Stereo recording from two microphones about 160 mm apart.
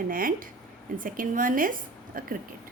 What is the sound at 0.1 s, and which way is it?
A woman's voice, 60° right (ahead or behind).